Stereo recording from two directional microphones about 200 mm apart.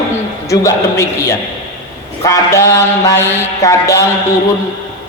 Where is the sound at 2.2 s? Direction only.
15° left (ahead or behind).